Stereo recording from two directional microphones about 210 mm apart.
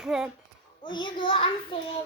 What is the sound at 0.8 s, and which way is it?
Speech, 25° left (ahead or behind).